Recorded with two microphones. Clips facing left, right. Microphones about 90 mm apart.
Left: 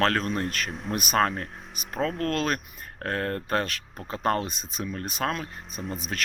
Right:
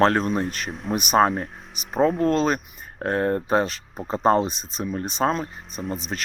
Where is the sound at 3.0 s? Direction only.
20° right (ahead or behind).